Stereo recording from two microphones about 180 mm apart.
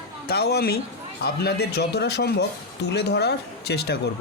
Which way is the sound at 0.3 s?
65° left (ahead or behind).